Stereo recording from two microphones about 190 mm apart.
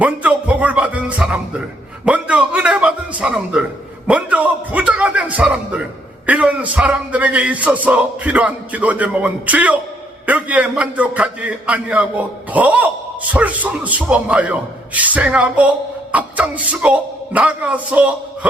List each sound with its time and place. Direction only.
0.0 s a man's voice: 5° right (ahead or behind)